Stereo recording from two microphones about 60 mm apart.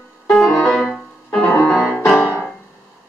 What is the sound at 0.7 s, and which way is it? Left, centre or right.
Music, centre.